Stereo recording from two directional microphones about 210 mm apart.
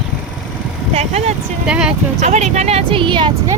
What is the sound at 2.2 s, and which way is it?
Speech, 35° right (ahead or behind).